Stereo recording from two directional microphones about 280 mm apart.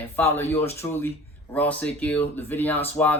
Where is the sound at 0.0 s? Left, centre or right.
Centre.